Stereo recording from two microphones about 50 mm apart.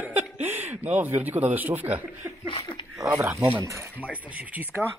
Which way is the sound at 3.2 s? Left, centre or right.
Right.